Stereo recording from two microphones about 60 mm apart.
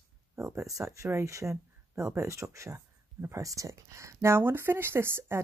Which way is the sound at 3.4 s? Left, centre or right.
Right.